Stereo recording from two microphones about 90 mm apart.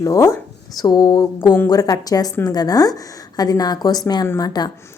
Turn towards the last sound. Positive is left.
turn(degrees=45)  # may be behind; listen again after turning